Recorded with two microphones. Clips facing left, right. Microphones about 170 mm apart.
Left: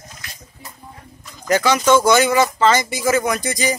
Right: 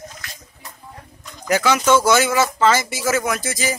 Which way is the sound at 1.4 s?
5° right (ahead or behind).